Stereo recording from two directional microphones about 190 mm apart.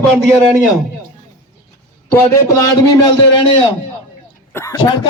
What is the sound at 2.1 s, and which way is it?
A man's voice, 15° left (ahead or behind).